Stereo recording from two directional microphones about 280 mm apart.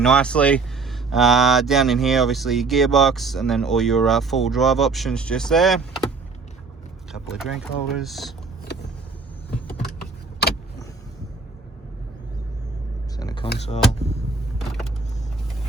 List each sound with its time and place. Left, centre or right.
0.0 s speech: centre
7.1 s speech: centre
13.1 s a sound: centre